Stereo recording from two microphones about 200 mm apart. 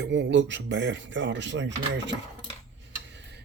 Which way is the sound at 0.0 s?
65° right (ahead or behind).